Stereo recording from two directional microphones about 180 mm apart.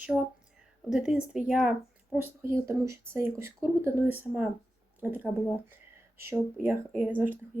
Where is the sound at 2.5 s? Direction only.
15° right (ahead or behind).